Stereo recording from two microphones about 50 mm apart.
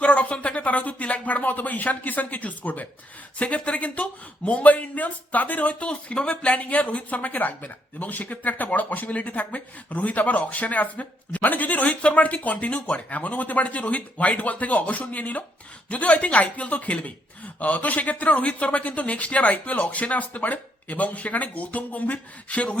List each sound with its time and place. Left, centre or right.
0.0 s speech: left